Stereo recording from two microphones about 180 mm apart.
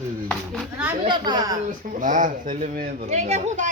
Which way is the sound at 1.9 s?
45° right (ahead or behind).